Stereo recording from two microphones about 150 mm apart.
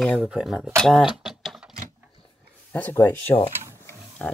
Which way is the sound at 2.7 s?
15° left (ahead or behind).